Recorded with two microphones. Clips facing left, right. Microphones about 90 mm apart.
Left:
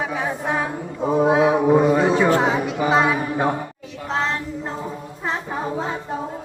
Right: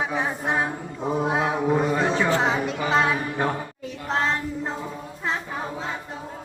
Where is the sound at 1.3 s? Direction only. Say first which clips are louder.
Left 8 dB; 5° left (ahead or behind).